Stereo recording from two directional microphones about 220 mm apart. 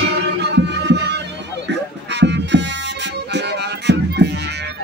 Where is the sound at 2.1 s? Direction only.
50° right (ahead or behind).